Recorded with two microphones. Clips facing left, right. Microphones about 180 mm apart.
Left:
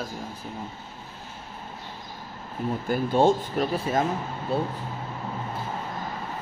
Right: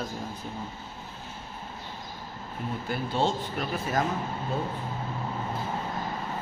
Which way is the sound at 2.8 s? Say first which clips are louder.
Left 7 dB; 45° left (ahead or behind).